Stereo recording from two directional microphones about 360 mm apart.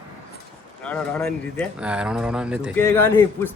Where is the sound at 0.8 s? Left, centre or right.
Centre.